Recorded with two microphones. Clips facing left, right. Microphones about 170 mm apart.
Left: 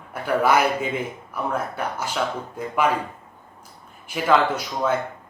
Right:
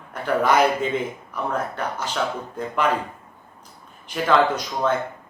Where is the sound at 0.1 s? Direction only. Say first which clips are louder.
Even; 10° left (ahead or behind).